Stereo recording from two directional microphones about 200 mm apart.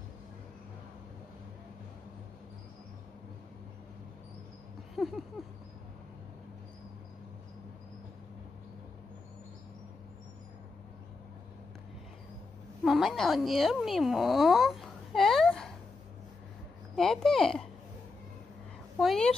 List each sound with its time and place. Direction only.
4.9 s a sound: centre (ahead or behind)
12.8 s speech: centre (ahead or behind)
16.9 s speech: centre (ahead or behind)
18.9 s a woman's voice: centre (ahead or behind)